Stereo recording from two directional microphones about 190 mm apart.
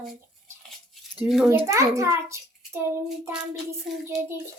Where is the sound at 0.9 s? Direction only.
Centre (ahead or behind).